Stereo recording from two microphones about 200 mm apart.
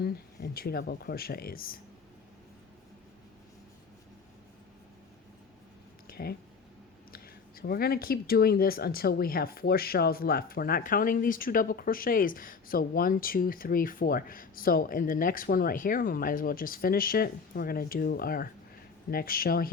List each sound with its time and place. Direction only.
0.0 s speech: 50° left (ahead or behind)
6.1 s a sound: 50° left (ahead or behind)
7.1 s speech: 50° left (ahead or behind)